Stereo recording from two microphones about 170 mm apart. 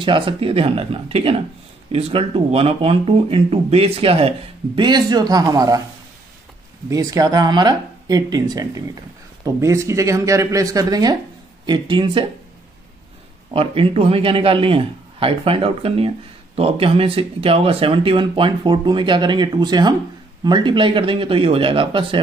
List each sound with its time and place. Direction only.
0.0 s speech: 30° right (ahead or behind)
6.9 s speech: 20° right (ahead or behind)
13.5 s speech: 30° right (ahead or behind)